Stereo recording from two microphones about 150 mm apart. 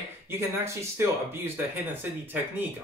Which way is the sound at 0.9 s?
15° right (ahead or behind).